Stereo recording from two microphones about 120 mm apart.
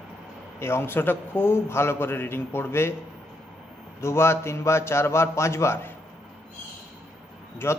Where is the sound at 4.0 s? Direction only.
20° left (ahead or behind).